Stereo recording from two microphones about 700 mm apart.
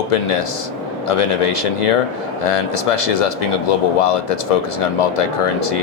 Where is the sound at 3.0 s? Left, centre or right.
Left.